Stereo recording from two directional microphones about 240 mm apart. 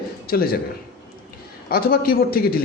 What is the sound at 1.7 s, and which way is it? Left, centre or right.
Speech, left.